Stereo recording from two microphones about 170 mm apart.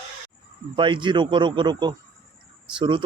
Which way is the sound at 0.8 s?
30° right (ahead or behind).